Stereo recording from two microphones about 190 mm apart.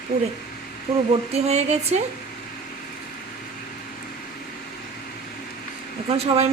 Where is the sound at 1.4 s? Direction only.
35° right (ahead or behind).